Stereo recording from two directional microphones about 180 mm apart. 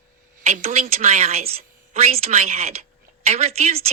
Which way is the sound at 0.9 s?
35° right (ahead or behind).